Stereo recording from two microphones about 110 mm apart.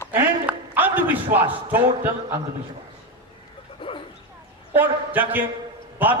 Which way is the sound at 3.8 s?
50° left (ahead or behind).